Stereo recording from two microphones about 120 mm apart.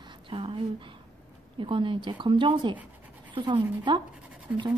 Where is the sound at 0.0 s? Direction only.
45° right (ahead or behind).